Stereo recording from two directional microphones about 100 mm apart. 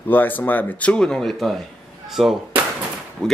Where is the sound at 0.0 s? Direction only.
20° left (ahead or behind).